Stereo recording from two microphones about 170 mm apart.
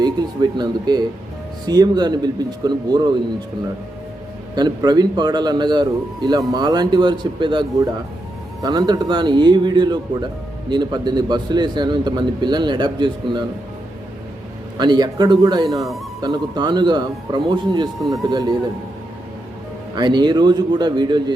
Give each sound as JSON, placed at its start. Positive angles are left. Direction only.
{"t": 0.5, "sound": "speech", "side_deg": -25}
{"t": 4.5, "sound": "speech", "side_deg": -25}
{"t": 14.8, "sound": "speech", "side_deg": -25}
{"t": 20.0, "sound": "speech", "side_deg": -25}